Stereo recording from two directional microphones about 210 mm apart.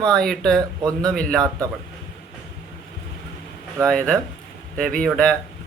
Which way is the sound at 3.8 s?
5° left (ahead or behind).